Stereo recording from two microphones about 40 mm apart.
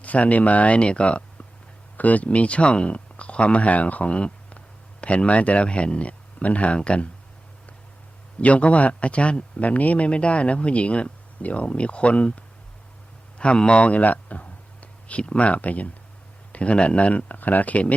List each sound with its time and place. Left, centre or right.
0.0 s speech: left
2.0 s speech: left
8.4 s speech: left
13.4 s speech: left
13.8 s speech: left